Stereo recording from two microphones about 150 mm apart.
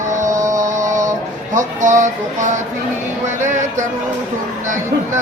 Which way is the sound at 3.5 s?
55° right (ahead or behind).